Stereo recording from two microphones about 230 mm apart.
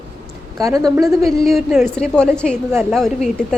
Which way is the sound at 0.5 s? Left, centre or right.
Centre.